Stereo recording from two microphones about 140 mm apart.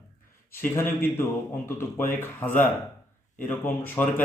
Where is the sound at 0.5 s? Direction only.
15° left (ahead or behind).